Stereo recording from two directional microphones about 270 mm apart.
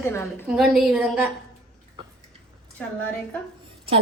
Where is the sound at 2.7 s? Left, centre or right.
Centre.